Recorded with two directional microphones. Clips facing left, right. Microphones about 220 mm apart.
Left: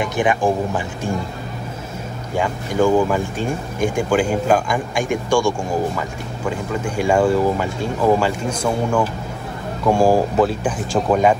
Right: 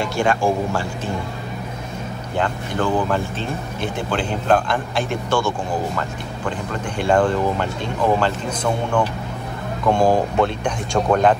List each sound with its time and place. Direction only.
0.0 s speech: 15° left (ahead or behind)
2.3 s speech: 10° left (ahead or behind)